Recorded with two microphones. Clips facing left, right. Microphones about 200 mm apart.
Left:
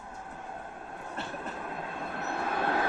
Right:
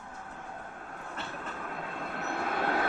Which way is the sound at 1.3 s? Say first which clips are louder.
Left 2 dB; 25° left (ahead or behind).